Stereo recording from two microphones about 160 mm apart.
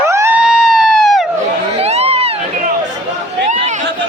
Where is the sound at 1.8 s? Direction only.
40° right (ahead or behind).